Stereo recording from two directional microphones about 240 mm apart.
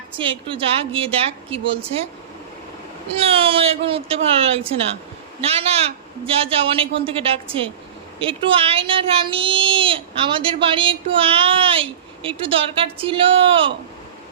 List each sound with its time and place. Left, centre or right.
0.2 s speech: right
3.2 s speech: right